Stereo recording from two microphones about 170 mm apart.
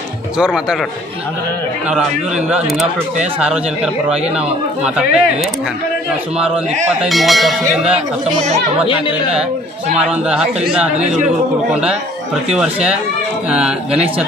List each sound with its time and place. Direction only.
0.4 s a man's voice: 5° right (ahead or behind)
1.9 s a man's voice: 5° right (ahead or behind)
7.0 s a man's voice: centre (ahead or behind)
8.3 s speech: 45° right (ahead or behind)
10.0 s a man's voice: 5° right (ahead or behind)
11.0 s speech: 45° right (ahead or behind)
12.4 s a man's voice: 5° right (ahead or behind)